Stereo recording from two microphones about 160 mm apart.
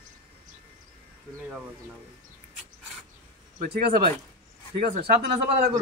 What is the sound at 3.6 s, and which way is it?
Speech, 70° right (ahead or behind).